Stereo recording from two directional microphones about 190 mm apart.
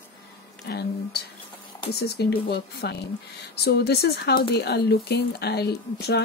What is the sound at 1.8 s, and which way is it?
Speech, 60° left (ahead or behind).